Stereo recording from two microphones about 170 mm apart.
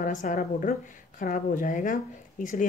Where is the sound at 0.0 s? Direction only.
50° left (ahead or behind).